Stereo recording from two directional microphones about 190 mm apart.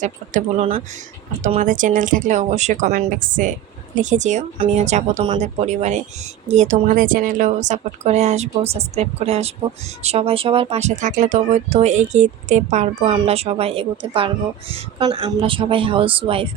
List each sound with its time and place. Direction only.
0.0 s speech: 35° right (ahead or behind)